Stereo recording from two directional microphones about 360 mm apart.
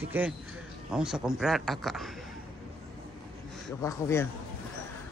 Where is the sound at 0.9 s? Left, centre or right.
Centre.